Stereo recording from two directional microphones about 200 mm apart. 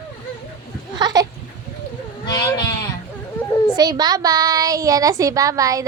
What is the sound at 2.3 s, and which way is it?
Speech, 20° left (ahead or behind).